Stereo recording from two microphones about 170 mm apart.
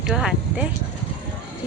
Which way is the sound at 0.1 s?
5° right (ahead or behind).